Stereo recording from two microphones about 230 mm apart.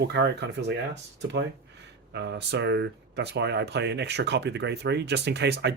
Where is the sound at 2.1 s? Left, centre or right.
Right.